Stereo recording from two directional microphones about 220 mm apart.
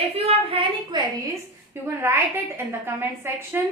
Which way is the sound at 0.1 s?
25° right (ahead or behind).